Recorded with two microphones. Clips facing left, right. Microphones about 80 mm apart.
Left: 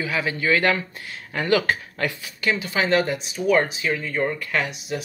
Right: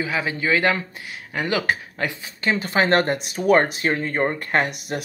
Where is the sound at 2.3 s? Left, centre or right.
Right.